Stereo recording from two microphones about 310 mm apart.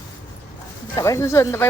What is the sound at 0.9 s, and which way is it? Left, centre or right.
Speech, centre.